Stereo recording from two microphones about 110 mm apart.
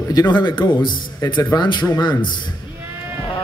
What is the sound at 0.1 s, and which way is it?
A man's voice, 40° left (ahead or behind).